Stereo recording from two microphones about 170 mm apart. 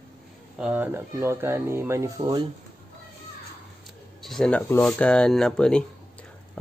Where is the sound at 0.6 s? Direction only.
10° right (ahead or behind).